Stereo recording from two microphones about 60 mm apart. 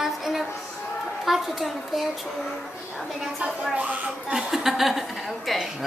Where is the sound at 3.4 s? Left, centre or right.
Right.